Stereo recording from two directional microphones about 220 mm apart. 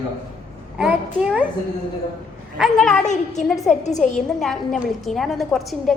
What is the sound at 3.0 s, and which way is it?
A woman's voice, 30° left (ahead or behind).